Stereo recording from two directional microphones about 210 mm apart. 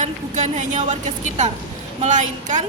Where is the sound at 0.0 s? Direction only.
35° right (ahead or behind).